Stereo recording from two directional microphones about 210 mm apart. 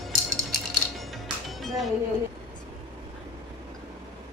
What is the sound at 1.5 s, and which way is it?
Music, centre (ahead or behind).